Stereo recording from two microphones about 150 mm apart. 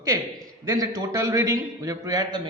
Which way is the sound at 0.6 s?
25° right (ahead or behind).